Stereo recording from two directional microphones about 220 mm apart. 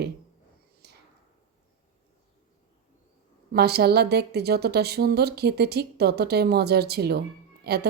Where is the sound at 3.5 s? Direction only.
45° right (ahead or behind).